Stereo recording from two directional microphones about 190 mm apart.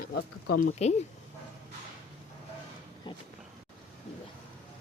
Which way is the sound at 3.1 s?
25° left (ahead or behind).